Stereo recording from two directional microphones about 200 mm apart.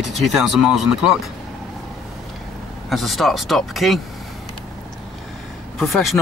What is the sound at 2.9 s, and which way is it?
Speech, centre (ahead or behind).